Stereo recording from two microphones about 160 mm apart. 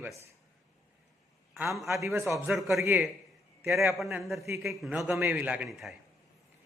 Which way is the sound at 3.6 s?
Centre (ahead or behind).